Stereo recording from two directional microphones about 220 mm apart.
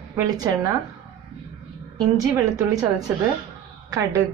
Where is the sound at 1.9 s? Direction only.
15° right (ahead or behind).